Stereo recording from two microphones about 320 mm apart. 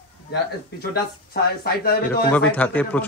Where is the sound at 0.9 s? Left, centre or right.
Left.